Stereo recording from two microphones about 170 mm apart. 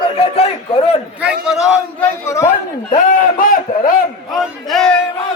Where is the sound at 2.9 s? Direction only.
50° left (ahead or behind).